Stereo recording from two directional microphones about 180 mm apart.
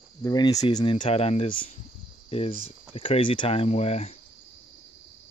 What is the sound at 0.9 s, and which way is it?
Speech, 35° left (ahead or behind).